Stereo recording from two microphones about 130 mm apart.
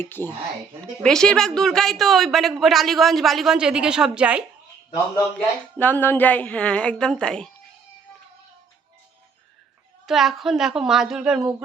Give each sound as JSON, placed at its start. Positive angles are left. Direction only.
{"t": 0.0, "sound": "a woman's voice", "side_deg": 15}
{"t": 1.0, "sound": "a woman's voice", "side_deg": 5}
{"t": 5.7, "sound": "a woman's voice", "side_deg": 10}
{"t": 10.1, "sound": "a woman's voice", "side_deg": 0}